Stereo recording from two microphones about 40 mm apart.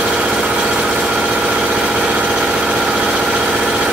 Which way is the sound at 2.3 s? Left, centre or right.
Centre.